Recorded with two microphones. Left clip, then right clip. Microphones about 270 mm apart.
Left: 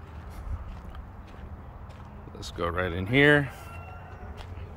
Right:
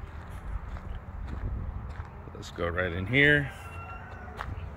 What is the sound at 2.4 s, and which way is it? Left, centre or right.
Speech, centre.